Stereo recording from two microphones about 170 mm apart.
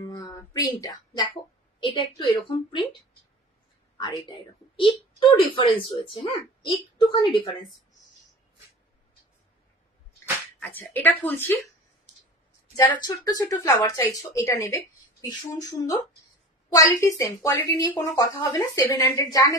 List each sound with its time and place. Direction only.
0.1 s a sound: 20° left (ahead or behind)
1.8 s a woman's voice: 30° left (ahead or behind)
4.0 s a woman's voice: 25° left (ahead or behind)
10.9 s speech: 10° left (ahead or behind)
12.7 s a woman's voice: 25° left (ahead or behind)